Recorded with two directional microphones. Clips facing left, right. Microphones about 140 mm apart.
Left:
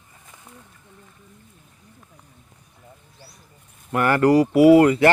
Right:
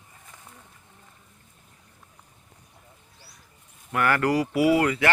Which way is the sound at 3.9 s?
30° left (ahead or behind).